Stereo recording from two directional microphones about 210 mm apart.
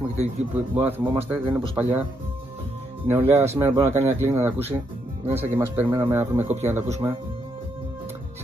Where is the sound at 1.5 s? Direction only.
5° right (ahead or behind).